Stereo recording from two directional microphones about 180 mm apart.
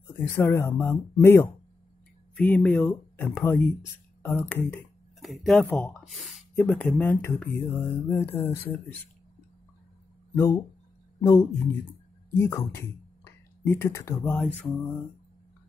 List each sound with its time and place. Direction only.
0.4 s speech: 15° left (ahead or behind)
10.3 s speech: 15° left (ahead or behind)